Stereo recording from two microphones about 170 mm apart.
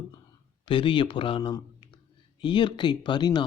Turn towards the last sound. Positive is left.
turn(degrees=25)  # may be behind; listen again after turning